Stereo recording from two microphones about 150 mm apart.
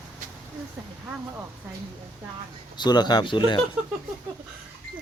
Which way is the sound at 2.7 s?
30° left (ahead or behind).